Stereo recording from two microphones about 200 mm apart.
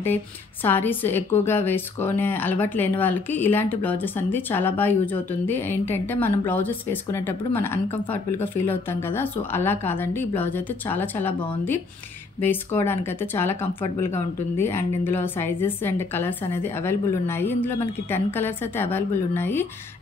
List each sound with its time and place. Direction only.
0.7 s a woman's voice: 10° left (ahead or behind)
12.4 s a woman's voice: 10° left (ahead or behind)